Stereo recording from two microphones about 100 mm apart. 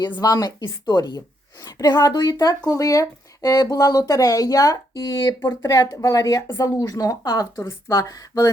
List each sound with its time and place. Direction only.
0.2 s speech: 40° left (ahead or behind)